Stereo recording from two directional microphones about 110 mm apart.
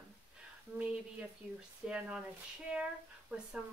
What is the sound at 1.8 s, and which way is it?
Speech, 10° right (ahead or behind).